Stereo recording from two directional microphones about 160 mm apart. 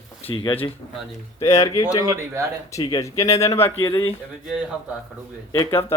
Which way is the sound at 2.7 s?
25° left (ahead or behind).